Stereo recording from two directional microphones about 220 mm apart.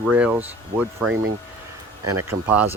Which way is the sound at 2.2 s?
10° right (ahead or behind).